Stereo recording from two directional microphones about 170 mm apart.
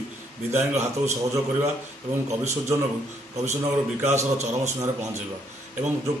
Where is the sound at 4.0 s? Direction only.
40° right (ahead or behind).